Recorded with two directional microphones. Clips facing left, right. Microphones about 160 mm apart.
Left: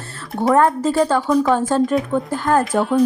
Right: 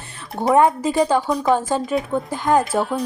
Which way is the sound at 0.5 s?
15° right (ahead or behind).